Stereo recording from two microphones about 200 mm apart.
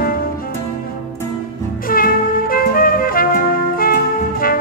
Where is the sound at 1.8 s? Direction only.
45° left (ahead or behind).